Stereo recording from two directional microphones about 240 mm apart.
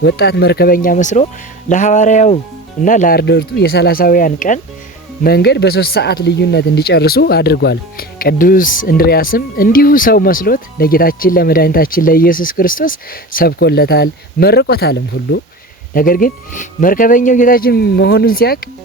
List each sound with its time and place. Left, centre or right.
0.0 s speech: left
16.0 s speech: left